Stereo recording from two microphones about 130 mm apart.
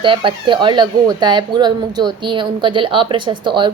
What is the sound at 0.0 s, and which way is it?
A woman's voice, 40° right (ahead or behind).